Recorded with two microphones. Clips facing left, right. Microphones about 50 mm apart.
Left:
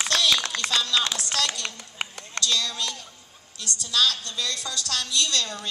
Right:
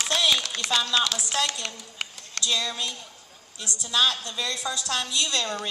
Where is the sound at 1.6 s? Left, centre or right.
Centre.